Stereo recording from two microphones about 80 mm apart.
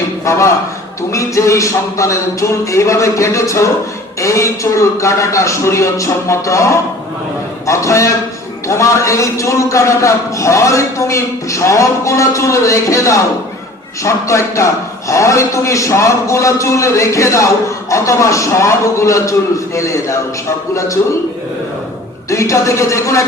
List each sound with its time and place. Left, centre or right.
0.3 s a man's voice: left
22.3 s a man's voice: left